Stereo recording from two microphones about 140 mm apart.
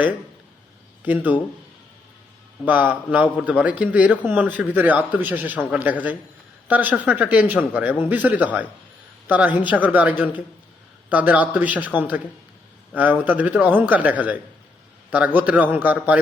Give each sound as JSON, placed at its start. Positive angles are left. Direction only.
{"t": 1.0, "sound": "a man's voice", "side_deg": -10}
{"t": 2.6, "sound": "a man's voice", "side_deg": -10}